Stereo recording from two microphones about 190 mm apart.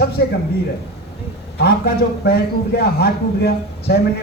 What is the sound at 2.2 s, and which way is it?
A man's voice, 55° left (ahead or behind).